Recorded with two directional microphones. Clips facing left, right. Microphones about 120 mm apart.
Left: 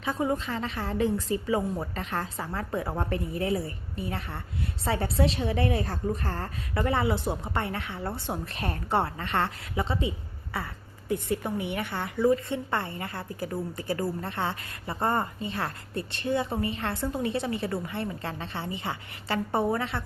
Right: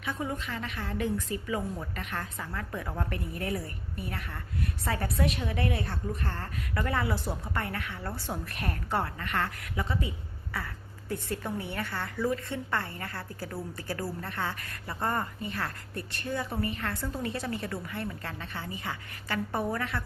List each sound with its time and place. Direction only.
0.0 s a woman's voice: 30° left (ahead or behind)
6.8 s a woman's voice: 25° left (ahead or behind)